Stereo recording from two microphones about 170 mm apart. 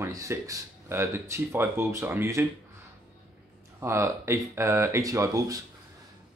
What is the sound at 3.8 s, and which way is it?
Speech, 15° right (ahead or behind).